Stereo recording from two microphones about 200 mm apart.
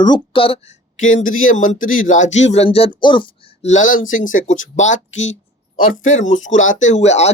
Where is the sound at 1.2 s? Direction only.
90° left.